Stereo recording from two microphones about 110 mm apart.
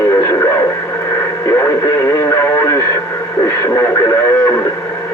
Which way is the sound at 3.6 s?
25° left (ahead or behind).